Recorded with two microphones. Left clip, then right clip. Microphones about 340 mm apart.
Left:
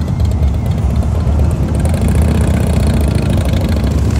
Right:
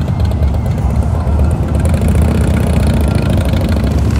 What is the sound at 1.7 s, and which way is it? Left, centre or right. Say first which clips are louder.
Vehicle: right 1 dB; centre.